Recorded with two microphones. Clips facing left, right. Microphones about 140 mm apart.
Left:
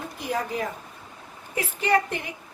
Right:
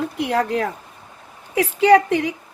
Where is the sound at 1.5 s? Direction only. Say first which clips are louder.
Right 10 dB; 90° right.